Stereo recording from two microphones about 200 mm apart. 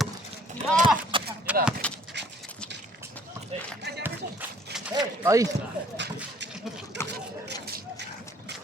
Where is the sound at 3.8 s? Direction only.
55° right (ahead or behind).